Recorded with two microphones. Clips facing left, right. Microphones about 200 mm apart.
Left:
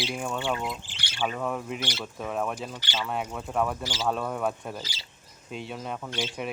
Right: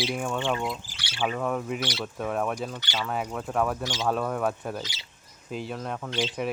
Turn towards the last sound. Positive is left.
turn(degrees=0)  # may be behind; listen again after turning